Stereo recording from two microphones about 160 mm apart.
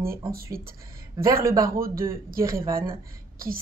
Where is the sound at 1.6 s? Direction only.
65° right (ahead or behind).